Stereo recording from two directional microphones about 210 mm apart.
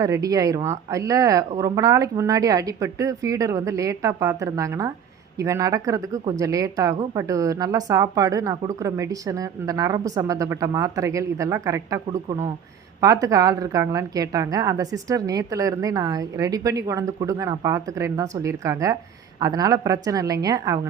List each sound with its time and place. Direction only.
0.0 s a woman's voice: 15° right (ahead or behind)